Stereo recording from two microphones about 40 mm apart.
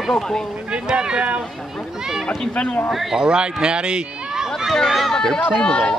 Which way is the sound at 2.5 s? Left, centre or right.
Left.